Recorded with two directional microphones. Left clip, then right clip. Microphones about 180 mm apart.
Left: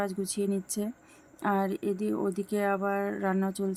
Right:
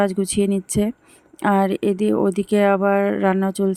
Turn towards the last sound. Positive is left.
turn(degrees=-40)  # may be behind; listen again after turning